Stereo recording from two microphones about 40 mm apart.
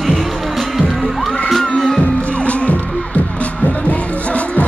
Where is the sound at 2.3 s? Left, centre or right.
Left.